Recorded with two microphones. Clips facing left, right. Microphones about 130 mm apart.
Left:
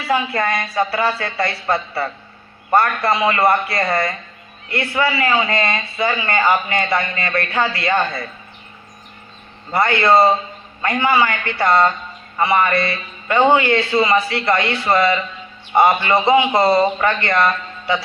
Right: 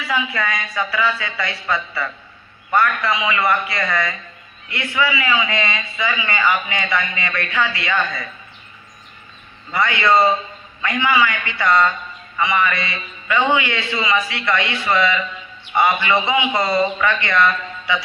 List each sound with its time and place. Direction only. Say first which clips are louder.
0.1 s a man's voice: left 4 dB; 40° left (ahead or behind)
1.9 s a man's voice: left 3 dB; 35° left (ahead or behind)
9.7 s a man's voice: left 3 dB; 40° left (ahead or behind)